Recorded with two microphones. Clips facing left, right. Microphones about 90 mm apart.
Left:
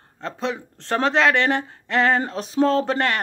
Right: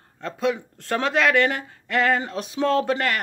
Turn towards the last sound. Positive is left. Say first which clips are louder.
# left 1 dB
turn(degrees=30)  # may be behind; listen again after turning